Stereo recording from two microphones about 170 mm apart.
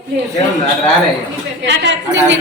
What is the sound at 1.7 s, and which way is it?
Speech, 90° right.